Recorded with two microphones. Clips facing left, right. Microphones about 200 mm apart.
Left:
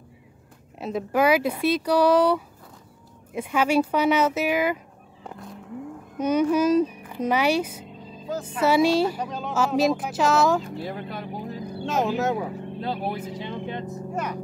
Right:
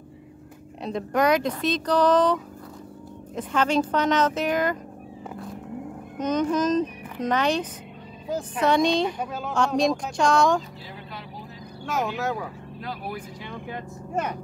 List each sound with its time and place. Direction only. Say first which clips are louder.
0.7 s speech: left 1 dB; 5° left (ahead or behind)
6.1 s speech: left 3 dB; 10° left (ahead or behind)
9.2 s speech: even; 5° right (ahead or behind)
9.5 s speech: left 1 dB; 5° left (ahead or behind)
10.8 s vehicle: left 8 dB; 50° left (ahead or behind)
11.8 s speech: left 3 dB; 25° left (ahead or behind)